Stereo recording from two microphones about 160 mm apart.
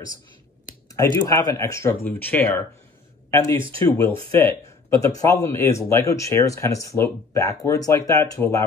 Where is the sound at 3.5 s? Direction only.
30° right (ahead or behind).